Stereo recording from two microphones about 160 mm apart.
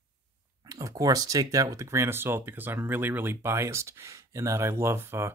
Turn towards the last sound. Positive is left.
turn(degrees=-15)  # may be behind; listen again after turning